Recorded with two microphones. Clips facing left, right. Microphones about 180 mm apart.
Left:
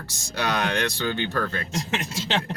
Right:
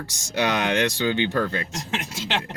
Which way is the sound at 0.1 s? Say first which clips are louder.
Right 3 dB; 15° right (ahead or behind).